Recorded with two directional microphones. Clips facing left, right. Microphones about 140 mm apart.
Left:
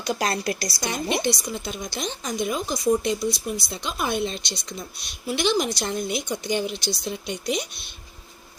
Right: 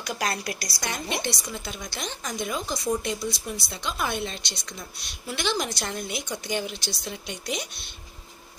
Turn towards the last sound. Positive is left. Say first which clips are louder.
# left 5 dB
turn(degrees=15)  # may be behind; listen again after turning